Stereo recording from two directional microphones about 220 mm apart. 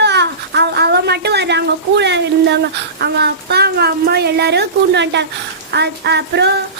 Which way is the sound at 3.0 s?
50° right (ahead or behind).